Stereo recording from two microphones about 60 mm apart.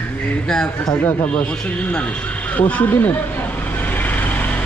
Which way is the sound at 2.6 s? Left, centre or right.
Left.